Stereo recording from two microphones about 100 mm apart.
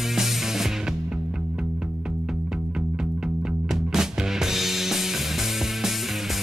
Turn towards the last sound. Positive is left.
turn(degrees=-5)  # may be behind; listen again after turning